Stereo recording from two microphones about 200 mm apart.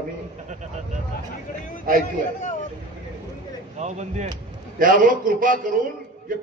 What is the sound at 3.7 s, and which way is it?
A man's voice, 35° right (ahead or behind).